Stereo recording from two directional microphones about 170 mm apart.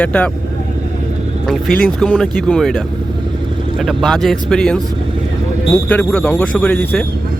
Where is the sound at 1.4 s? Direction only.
5° left (ahead or behind).